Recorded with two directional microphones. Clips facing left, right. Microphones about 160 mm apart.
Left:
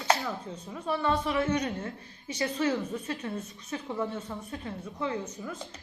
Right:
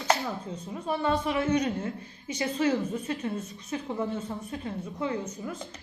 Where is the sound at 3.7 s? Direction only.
25° right (ahead or behind).